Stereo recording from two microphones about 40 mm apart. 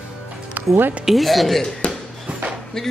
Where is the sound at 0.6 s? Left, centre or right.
Right.